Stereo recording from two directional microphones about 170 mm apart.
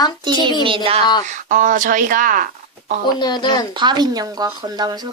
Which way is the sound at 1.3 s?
50° right (ahead or behind).